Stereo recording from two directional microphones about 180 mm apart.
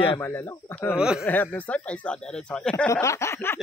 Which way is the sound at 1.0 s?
5° right (ahead or behind).